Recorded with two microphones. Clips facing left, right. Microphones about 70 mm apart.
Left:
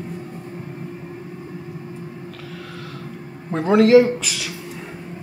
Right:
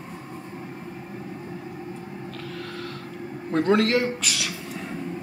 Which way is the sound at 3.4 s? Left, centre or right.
Centre.